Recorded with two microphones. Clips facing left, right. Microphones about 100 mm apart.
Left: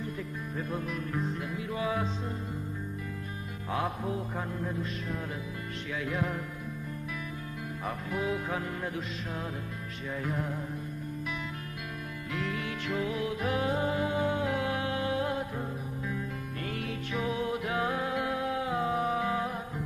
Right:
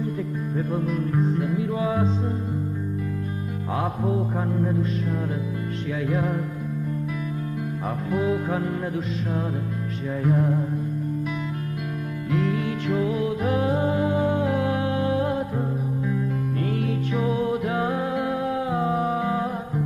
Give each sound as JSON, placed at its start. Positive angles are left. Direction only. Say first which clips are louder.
{"t": 0.6, "sound": "music", "louder": "right 9 dB", "side_deg": -35}
{"t": 4.0, "sound": "mantra", "louder": "right 9 dB", "side_deg": -35}
{"t": 6.0, "sound": "mantra", "louder": "right 7 dB", "side_deg": -35}
{"t": 8.1, "sound": "mantra", "louder": "right 9 dB", "side_deg": -35}
{"t": 10.2, "sound": "mantra", "louder": "right 13 dB", "side_deg": -40}
{"t": 12.3, "sound": "music", "louder": "right 10 dB", "side_deg": -35}
{"t": 17.1, "sound": "music", "louder": "right 6 dB", "side_deg": -35}